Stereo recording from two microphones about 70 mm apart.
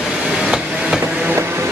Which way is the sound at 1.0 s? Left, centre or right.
Centre.